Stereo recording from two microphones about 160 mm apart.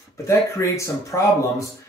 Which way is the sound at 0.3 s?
20° left (ahead or behind).